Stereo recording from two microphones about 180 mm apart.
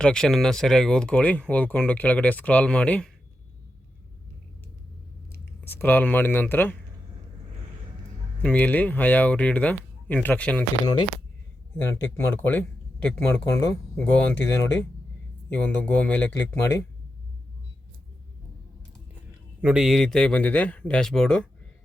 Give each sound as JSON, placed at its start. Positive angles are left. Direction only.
{"t": 0.0, "sound": "speech", "side_deg": 5}
{"t": 5.3, "sound": "speech", "side_deg": 10}
{"t": 8.4, "sound": "speech", "side_deg": 10}
{"t": 11.8, "sound": "speech", "side_deg": 10}
{"t": 19.6, "sound": "speech", "side_deg": -5}